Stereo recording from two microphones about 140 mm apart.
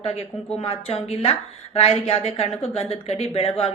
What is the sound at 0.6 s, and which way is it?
Speech, 45° left (ahead or behind).